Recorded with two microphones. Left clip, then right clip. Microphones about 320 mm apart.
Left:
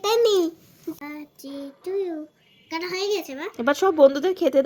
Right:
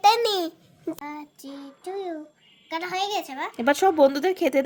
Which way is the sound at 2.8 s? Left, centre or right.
Centre.